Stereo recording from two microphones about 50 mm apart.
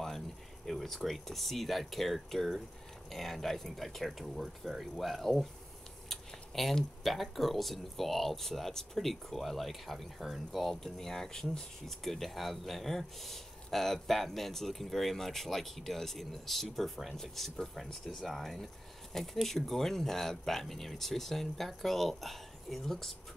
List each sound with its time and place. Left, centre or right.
0.7 s speech: centre